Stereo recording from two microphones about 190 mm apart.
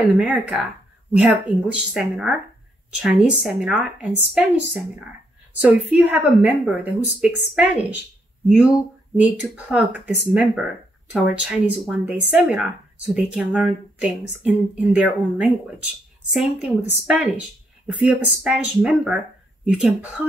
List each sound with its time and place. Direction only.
0.2 s speech: 5° right (ahead or behind)
5.6 s a woman's voice: 10° right (ahead or behind)